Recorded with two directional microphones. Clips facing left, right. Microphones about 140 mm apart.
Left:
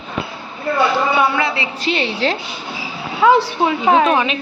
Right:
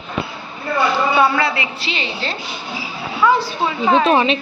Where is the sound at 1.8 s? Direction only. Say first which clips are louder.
Left 6 dB; 55° left (ahead or behind); by 3.7 s 80° left.